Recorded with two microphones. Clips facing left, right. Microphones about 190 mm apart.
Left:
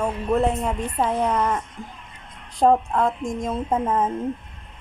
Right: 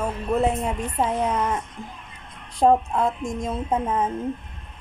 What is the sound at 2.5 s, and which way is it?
A woman's voice, centre (ahead or behind).